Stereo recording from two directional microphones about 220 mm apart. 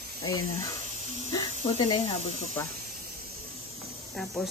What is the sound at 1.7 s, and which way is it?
Speech, 25° left (ahead or behind).